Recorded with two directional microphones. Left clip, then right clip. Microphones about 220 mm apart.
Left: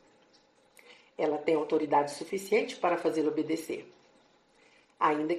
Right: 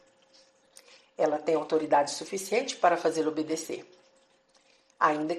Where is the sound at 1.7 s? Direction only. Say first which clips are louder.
Right 2 dB; 25° right (ahead or behind).